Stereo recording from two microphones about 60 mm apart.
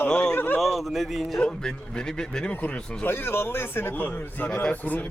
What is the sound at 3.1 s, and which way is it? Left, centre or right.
Speech, left.